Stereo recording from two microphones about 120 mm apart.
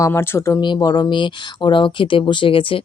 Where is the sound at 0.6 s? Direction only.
35° left (ahead or behind).